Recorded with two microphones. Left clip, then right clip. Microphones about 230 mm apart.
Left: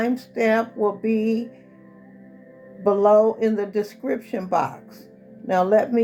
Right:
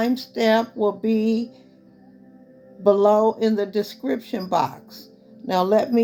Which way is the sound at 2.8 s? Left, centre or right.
Right.